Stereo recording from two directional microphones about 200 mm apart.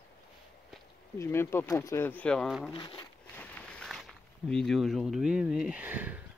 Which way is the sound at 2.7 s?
25° left (ahead or behind).